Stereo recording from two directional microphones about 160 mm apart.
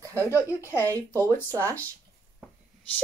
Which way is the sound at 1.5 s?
15° right (ahead or behind).